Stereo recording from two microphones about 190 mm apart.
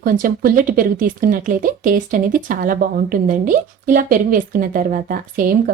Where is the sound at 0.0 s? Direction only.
50° right (ahead or behind).